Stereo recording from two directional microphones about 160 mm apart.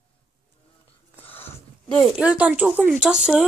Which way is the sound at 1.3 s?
15° left (ahead or behind).